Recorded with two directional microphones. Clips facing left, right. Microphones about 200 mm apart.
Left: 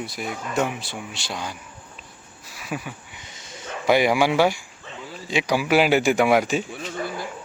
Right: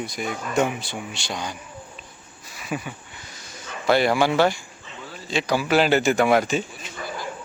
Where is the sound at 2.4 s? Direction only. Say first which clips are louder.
Right 1 dB; 5° left (ahead or behind).